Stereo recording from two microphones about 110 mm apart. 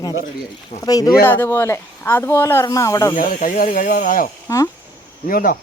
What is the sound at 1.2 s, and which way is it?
Speech, 20° left (ahead or behind).